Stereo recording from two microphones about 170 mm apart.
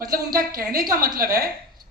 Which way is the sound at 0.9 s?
20° right (ahead or behind).